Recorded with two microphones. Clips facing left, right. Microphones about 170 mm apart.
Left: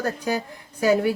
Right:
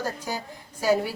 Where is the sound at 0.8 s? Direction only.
60° left (ahead or behind).